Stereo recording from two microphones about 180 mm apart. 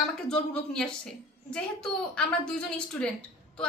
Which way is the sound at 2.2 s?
5° left (ahead or behind).